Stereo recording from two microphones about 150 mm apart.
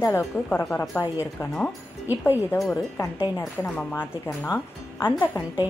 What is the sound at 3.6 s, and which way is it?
Speech, 15° left (ahead or behind).